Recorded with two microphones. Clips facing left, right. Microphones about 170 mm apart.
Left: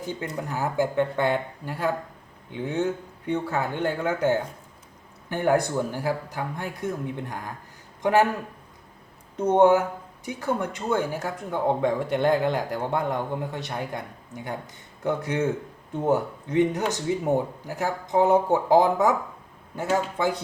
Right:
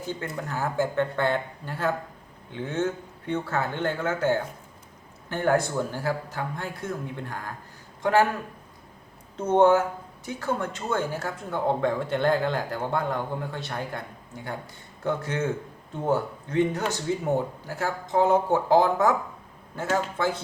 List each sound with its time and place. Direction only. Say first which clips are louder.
0.0 s speech: left 1 dB; 15° left (ahead or behind)
9.3 s speech: left 1 dB; 15° left (ahead or behind)